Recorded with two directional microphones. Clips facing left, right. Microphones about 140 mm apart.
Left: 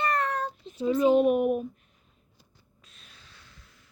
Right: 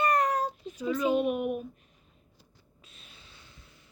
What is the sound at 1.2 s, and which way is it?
Speech, 40° left (ahead or behind).